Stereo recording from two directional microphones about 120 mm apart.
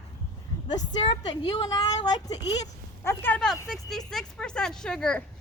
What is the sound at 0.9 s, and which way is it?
Speech, 45° left (ahead or behind).